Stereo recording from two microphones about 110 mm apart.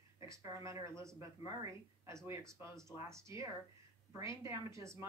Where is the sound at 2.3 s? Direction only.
25° right (ahead or behind).